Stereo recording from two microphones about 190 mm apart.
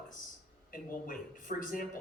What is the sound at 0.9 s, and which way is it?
Speech, 45° left (ahead or behind).